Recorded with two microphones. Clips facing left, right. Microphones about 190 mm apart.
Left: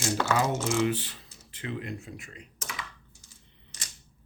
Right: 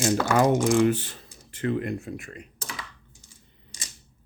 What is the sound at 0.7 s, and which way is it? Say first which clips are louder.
Speech: right 6 dB; 50° right (ahead or behind).